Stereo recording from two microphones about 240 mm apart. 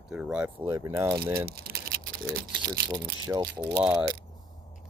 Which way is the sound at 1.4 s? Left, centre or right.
Right.